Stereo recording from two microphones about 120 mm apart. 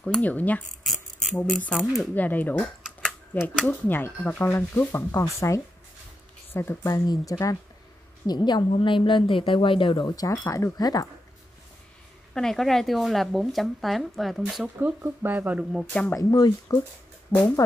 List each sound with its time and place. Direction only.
0.0 s speech: 10° left (ahead or behind)
0.7 s a sound: centre (ahead or behind)
1.7 s speech: centre (ahead or behind)
2.1 s speech: 15° left (ahead or behind)
2.8 s a sound: centre (ahead or behind)
3.3 s speech: 15° left (ahead or behind); by 11.1 s 30° left (ahead or behind)
12.4 s speech: 5° left (ahead or behind)
14.8 s speech: 15° right (ahead or behind)
15.7 s speech: 10° left (ahead or behind)
16.2 s speech: 35° left (ahead or behind)
17.3 s speech: 15° left (ahead or behind)